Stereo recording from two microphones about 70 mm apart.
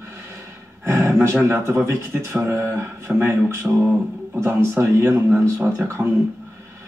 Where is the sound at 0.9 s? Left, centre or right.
Right.